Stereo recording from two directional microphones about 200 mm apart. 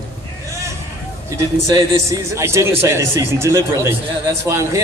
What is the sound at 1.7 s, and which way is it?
A man's voice, 15° right (ahead or behind).